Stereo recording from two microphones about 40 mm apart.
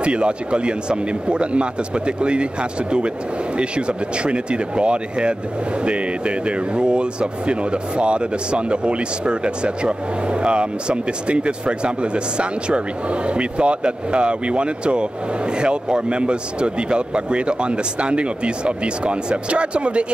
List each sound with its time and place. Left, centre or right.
0.0 s speech: right
3.5 s speech: right